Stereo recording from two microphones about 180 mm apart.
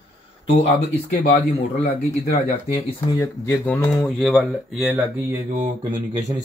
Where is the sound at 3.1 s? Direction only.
15° left (ahead or behind).